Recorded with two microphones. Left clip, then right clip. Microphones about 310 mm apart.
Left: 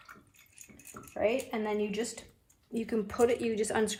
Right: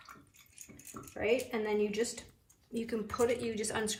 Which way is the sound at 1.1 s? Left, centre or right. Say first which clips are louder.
Left 2 dB; centre.